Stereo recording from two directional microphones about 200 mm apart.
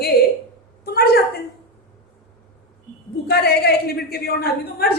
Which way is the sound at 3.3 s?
50° left (ahead or behind).